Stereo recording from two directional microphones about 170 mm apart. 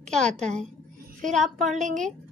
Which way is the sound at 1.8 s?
45° right (ahead or behind).